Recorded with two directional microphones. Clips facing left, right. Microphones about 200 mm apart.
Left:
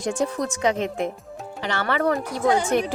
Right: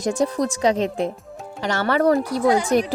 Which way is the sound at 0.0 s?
40° right (ahead or behind).